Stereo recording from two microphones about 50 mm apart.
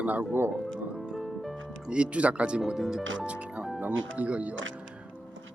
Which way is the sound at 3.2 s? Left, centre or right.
Right.